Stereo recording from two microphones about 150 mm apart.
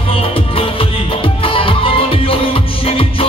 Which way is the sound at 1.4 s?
35° left (ahead or behind).